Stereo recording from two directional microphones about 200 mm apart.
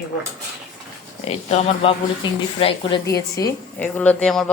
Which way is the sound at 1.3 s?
30° left (ahead or behind).